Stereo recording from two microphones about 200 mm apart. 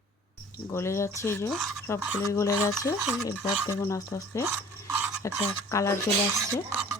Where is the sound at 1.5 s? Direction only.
Centre (ahead or behind).